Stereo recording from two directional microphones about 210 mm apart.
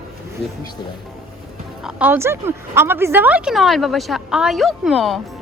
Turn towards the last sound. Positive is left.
turn(degrees=0)  # may be behind; listen again after turning